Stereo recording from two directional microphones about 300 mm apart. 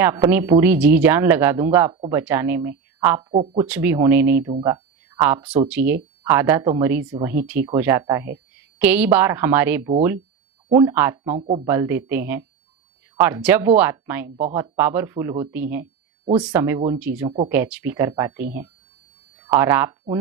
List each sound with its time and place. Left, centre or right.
0.0 s speech: centre
3.3 s speech: centre
3.7 s speech: centre
17.2 s speech: centre
17.5 s speech: centre